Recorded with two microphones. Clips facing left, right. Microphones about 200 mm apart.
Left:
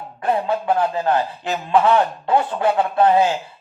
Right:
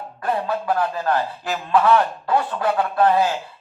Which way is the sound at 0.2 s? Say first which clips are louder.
Left 3 dB; 25° left (ahead or behind).